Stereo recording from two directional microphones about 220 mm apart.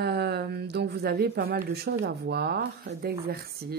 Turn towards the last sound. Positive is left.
turn(degrees=-45)  # may be behind; listen again after turning